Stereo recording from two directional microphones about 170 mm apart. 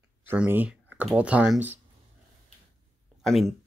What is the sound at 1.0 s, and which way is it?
Speech, 5° right (ahead or behind).